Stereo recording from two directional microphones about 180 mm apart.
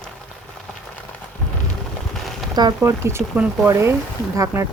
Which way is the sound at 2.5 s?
20° right (ahead or behind).